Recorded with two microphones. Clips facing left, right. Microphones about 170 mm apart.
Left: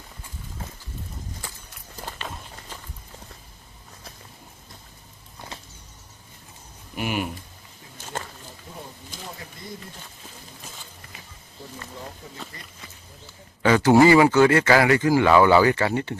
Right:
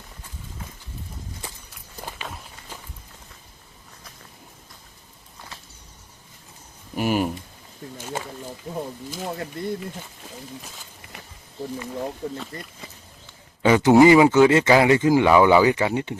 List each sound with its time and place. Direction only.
2.2 s walk: 5° right (ahead or behind)
6.9 s speech: 40° right (ahead or behind)
9.2 s a sound: 65° right (ahead or behind)
12.2 s speech: 60° right (ahead or behind)
13.6 s speech: 20° right (ahead or behind)